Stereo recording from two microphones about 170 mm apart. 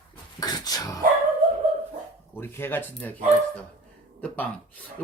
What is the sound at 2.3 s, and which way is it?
Speech, 15° left (ahead or behind).